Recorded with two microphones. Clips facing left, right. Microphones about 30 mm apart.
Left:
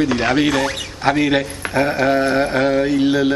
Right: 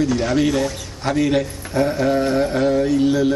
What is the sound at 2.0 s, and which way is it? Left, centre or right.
Speech, left.